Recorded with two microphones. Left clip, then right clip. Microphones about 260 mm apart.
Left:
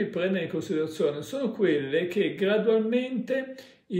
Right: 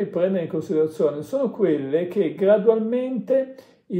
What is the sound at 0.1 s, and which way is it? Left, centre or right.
Speech, centre.